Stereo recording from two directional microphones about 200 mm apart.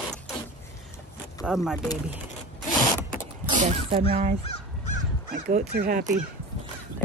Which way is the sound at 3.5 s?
35° right (ahead or behind).